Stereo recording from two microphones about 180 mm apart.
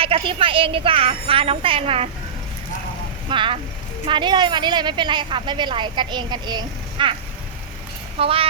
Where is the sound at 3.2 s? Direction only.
30° right (ahead or behind).